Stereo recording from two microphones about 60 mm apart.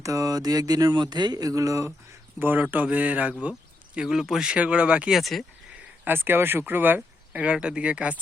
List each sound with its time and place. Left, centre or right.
0.0 s speech: right
2.6 s speech: right
3.9 s speech: centre
4.5 s speech: centre
5.0 s speech: centre
6.1 s speech: right
7.4 s speech: centre